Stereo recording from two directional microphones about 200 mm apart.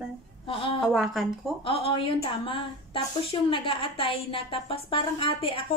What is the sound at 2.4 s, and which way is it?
A woman's voice, 25° left (ahead or behind).